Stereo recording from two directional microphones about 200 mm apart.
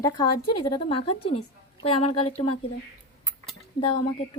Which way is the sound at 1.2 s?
90° left.